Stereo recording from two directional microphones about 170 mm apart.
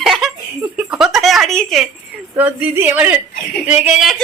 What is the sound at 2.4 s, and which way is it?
Speech, 10° right (ahead or behind).